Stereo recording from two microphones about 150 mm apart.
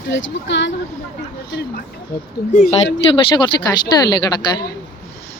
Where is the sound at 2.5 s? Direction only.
65° left (ahead or behind).